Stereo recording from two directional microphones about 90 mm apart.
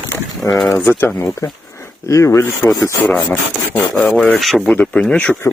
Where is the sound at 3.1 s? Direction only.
20° left (ahead or behind).